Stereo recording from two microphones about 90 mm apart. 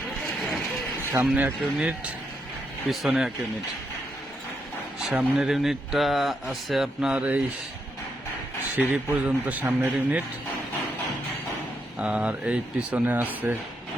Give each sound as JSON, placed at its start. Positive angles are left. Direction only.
{"t": 1.2, "sound": "speech", "side_deg": -20}
{"t": 2.9, "sound": "speech", "side_deg": -5}
{"t": 5.1, "sound": "speech", "side_deg": -5}
{"t": 8.7, "sound": "a man's voice", "side_deg": -20}
{"t": 11.9, "sound": "speech", "side_deg": -15}